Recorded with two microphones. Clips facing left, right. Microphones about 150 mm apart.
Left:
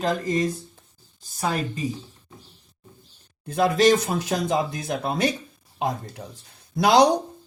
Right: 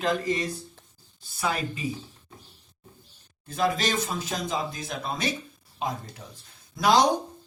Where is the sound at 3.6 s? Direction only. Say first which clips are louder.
Left 8 dB; 60° left (ahead or behind).